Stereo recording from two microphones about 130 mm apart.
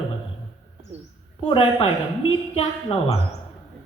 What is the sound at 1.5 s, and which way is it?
A woman's voice, 45° left (ahead or behind).